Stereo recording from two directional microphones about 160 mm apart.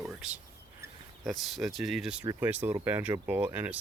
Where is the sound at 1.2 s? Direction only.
Centre (ahead or behind).